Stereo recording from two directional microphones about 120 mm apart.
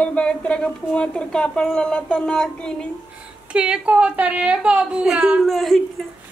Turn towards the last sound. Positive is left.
turn(degrees=0)  # may be behind; listen again after turning